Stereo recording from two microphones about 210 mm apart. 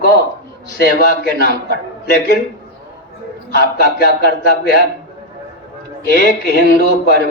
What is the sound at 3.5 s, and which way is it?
A man's voice, 45° left (ahead or behind).